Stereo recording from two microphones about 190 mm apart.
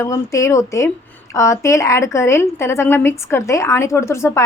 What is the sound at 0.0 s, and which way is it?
A woman's voice, 15° left (ahead or behind).